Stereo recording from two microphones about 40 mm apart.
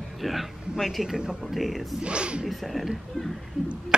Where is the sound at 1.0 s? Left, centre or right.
Centre.